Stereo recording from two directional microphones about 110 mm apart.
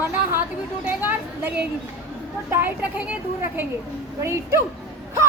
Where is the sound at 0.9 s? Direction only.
15° right (ahead or behind).